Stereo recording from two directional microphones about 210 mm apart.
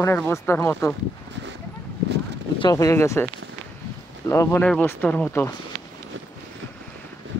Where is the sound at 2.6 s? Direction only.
20° left (ahead or behind).